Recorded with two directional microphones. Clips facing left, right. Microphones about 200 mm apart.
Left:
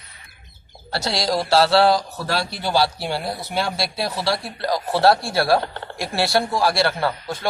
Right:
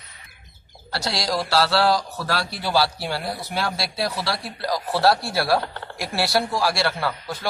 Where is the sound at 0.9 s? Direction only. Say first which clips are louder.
Left 3 dB; 25° left (ahead or behind).